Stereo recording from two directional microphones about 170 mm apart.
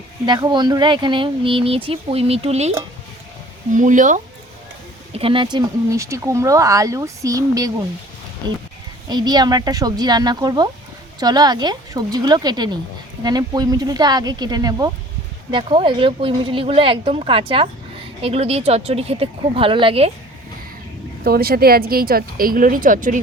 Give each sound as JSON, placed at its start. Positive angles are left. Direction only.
{"t": 0.3, "sound": "speech", "side_deg": -25}
{"t": 3.8, "sound": "speech", "side_deg": -50}
{"t": 5.1, "sound": "speech", "side_deg": -30}
{"t": 9.0, "sound": "speech", "side_deg": -25}
{"t": 21.2, "sound": "speech", "side_deg": -60}